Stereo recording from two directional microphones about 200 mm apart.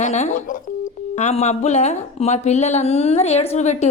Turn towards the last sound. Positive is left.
turn(degrees=35)  # may be behind; listen again after turning